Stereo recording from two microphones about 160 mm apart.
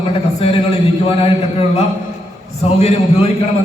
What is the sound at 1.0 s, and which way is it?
A man's voice, 35° left (ahead or behind).